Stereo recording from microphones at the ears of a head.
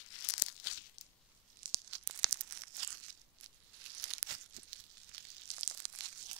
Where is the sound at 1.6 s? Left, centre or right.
Right.